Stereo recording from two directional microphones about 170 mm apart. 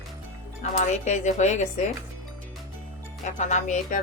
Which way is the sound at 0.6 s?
45° left (ahead or behind).